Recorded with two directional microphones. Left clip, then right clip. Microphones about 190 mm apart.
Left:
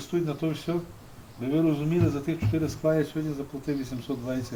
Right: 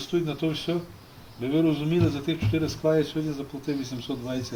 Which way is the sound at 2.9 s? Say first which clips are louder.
Right 4 dB; 25° left (ahead or behind).